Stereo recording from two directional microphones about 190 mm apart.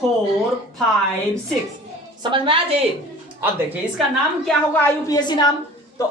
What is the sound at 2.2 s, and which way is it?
Speech, 25° right (ahead or behind).